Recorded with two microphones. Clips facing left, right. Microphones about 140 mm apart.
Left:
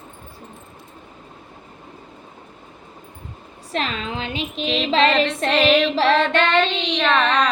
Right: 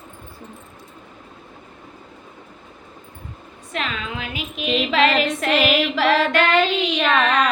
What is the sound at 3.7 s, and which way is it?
Speech, 35° left (ahead or behind).